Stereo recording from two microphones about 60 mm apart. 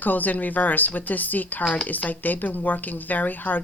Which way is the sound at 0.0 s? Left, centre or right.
Left.